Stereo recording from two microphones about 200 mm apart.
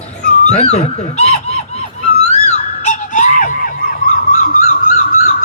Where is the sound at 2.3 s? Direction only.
35° left (ahead or behind).